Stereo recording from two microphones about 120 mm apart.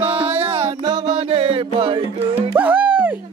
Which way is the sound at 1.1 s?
55° right (ahead or behind).